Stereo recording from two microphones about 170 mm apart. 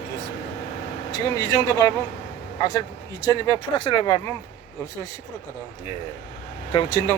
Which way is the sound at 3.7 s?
30° left (ahead or behind).